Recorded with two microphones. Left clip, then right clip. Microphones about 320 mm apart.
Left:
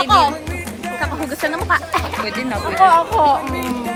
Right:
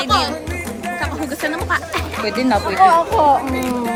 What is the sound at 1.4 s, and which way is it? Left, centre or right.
Speech, centre.